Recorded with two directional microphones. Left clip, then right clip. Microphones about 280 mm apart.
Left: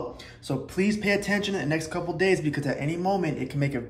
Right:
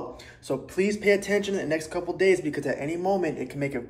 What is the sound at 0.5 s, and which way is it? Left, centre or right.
Speech, centre.